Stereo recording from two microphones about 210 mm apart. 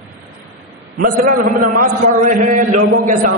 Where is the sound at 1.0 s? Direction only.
40° right (ahead or behind).